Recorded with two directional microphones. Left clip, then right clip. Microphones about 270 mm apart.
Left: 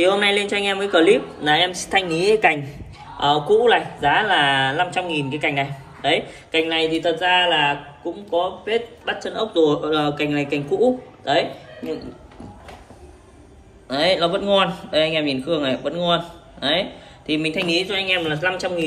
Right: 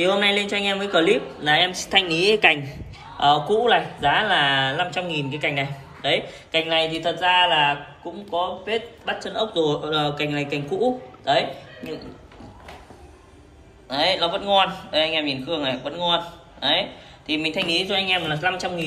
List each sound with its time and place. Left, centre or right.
0.0 s a man's voice: centre
13.8 s a man's voice: centre